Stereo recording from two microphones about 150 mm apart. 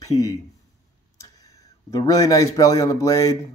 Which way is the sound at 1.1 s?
25° left (ahead or behind).